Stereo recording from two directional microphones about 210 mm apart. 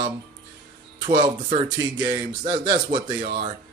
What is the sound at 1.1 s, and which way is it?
Speech, 25° right (ahead or behind).